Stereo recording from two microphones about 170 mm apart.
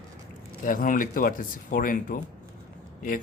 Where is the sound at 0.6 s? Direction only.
55° left (ahead or behind).